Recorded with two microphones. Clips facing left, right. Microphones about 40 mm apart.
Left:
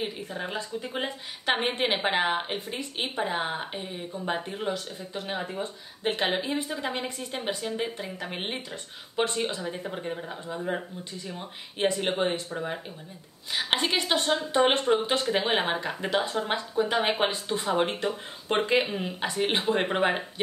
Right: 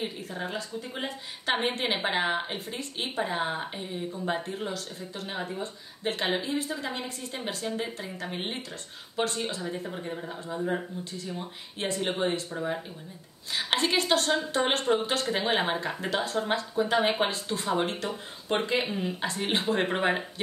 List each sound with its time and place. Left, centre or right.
0.0 s speech: centre
0.6 s speech: left
5.3 s speech: centre
5.6 s speech: left
7.6 s speech: centre
9.6 s speech: centre
11.3 s speech: left